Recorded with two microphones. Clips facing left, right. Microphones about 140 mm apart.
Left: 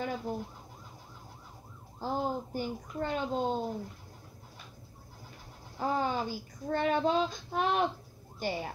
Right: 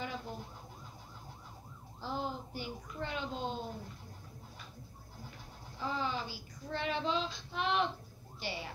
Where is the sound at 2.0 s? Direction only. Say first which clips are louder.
Left 6 dB; 45° left (ahead or behind).